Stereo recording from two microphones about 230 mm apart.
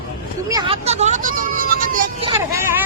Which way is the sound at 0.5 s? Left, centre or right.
Right.